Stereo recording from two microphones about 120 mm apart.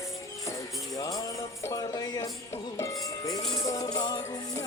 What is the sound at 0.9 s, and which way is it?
Music, 35° left (ahead or behind).